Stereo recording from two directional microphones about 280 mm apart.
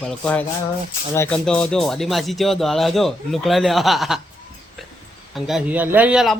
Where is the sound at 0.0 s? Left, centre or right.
Centre.